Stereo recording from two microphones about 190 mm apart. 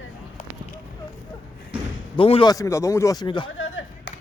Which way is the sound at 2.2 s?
25° left (ahead or behind).